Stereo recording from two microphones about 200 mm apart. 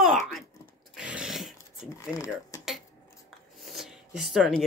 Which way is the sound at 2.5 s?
15° left (ahead or behind).